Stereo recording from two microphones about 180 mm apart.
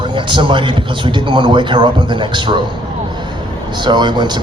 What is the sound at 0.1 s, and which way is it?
A man's voice, 25° right (ahead or behind).